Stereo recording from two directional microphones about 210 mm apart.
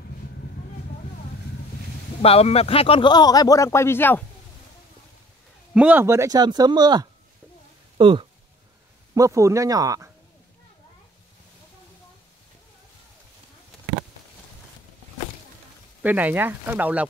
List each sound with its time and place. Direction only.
2.2 s speech: 30° left (ahead or behind); by 4.2 s 10° left (ahead or behind)
5.8 s speech: 10° right (ahead or behind)
16.0 s speech: 10° right (ahead or behind)